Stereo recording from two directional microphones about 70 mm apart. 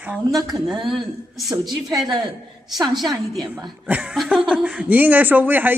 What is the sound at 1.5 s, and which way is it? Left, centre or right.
Speech, right.